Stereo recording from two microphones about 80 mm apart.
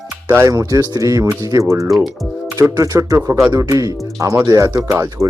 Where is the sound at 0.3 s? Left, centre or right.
Right.